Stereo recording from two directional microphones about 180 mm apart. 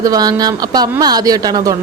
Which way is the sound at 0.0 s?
20° right (ahead or behind).